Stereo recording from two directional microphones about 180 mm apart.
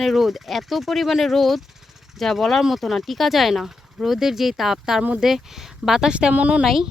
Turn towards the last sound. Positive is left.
turn(degrees=0)  # may be behind; listen again after turning